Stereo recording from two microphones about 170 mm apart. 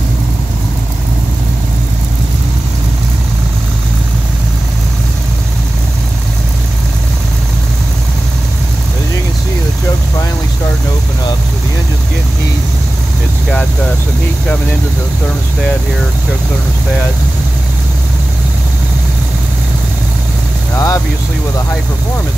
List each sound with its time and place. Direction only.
20.7 s vehicle: 20° left (ahead or behind)